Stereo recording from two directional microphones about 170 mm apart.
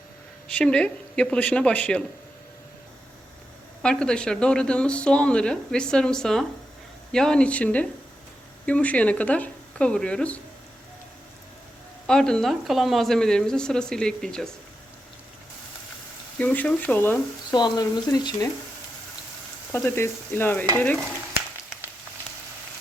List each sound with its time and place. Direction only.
0.4 s speech: 5° left (ahead or behind)
3.8 s speech: 5° left (ahead or behind)
12.0 s speech: 5° left (ahead or behind)
16.4 s speech: 10° left (ahead or behind)
17.5 s speech: 25° left (ahead or behind)
19.7 s speech: 15° left (ahead or behind)